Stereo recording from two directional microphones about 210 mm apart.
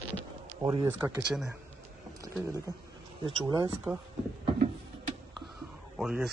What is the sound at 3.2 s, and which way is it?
Speech, 20° right (ahead or behind).